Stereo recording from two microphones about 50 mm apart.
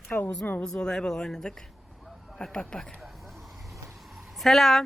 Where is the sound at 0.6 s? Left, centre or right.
Centre.